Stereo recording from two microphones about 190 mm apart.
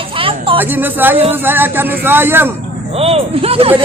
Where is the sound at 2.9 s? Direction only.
30° right (ahead or behind).